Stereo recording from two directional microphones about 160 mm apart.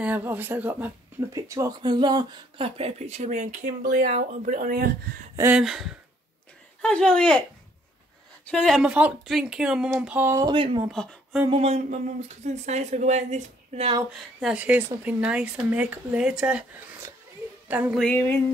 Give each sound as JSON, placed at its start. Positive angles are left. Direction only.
{"t": 0.0, "sound": "speech", "side_deg": -10}
{"t": 1.3, "sound": "a woman's voice", "side_deg": -20}
{"t": 5.3, "sound": "a sound", "side_deg": -15}
{"t": 5.6, "sound": "speech", "side_deg": 0}
{"t": 8.5, "sound": "speech", "side_deg": 5}
{"t": 10.4, "sound": "speech", "side_deg": -35}
{"t": 10.9, "sound": "speech", "side_deg": 5}
{"t": 11.5, "sound": "a woman's voice", "side_deg": -45}
{"t": 14.1, "sound": "speech", "side_deg": -5}
{"t": 18.0, "sound": "a sound", "side_deg": 15}